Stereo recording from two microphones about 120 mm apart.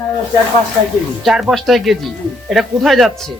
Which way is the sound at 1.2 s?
5° right (ahead or behind).